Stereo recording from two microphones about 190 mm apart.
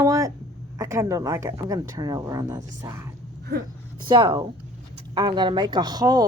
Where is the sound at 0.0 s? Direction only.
15° right (ahead or behind).